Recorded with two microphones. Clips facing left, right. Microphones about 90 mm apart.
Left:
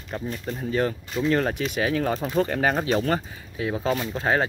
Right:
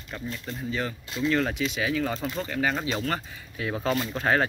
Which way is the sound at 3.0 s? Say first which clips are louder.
Left 5 dB; 25° left (ahead or behind).